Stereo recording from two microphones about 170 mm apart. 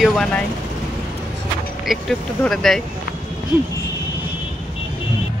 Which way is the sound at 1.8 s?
Centre (ahead or behind).